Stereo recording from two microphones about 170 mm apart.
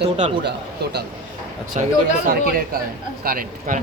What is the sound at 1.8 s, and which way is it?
Speech, 45° right (ahead or behind).